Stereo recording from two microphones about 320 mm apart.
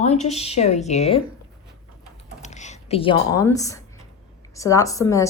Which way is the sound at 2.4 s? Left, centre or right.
Left.